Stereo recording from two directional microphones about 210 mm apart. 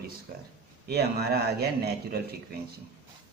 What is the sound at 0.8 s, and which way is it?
Speech, 50° right (ahead or behind).